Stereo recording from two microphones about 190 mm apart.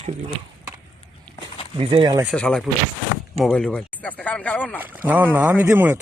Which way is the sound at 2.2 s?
5° left (ahead or behind).